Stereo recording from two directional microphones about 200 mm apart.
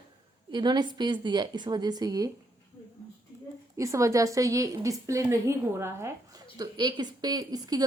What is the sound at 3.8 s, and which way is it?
A woman's voice, 15° right (ahead or behind).